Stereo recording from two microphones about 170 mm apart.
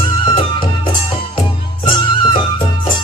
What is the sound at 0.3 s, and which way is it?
Music, 30° left (ahead or behind).